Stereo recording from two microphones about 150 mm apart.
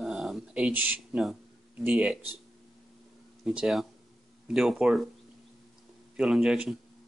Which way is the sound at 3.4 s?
Centre (ahead or behind).